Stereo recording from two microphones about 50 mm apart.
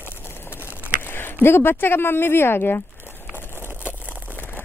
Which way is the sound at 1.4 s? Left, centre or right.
Left.